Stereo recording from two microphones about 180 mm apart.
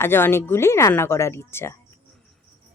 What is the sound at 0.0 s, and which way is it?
Speech, 10° left (ahead or behind).